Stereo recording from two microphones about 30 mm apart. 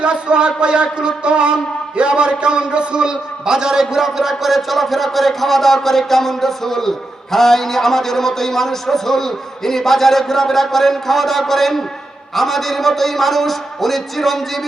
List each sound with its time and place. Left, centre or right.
0.0 s a man's voice: right; by 4.0 s centre
4.0 s a man's voice: centre